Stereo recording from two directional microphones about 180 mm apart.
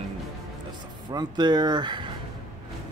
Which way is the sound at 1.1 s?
25° right (ahead or behind).